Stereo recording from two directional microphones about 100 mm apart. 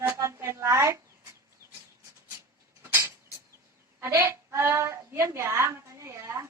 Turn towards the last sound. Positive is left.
turn(degrees=-25)  # may be behind; listen again after turning